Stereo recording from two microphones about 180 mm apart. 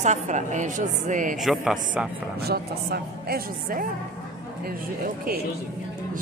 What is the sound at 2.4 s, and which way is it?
A woman's voice, 60° right (ahead or behind).